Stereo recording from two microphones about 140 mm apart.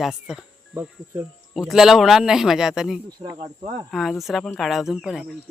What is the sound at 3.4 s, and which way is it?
Speech, 45° right (ahead or behind).